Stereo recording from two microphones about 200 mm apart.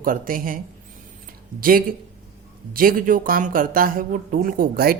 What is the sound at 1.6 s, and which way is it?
Speech, 45° right (ahead or behind).